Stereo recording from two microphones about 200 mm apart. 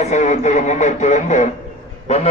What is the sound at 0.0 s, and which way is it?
Speech, 35° left (ahead or behind).